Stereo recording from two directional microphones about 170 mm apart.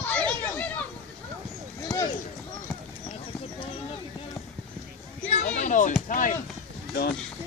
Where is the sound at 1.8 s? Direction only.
20° left (ahead or behind).